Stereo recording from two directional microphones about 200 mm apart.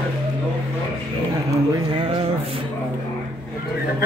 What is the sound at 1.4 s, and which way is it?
A man's voice, 20° right (ahead or behind).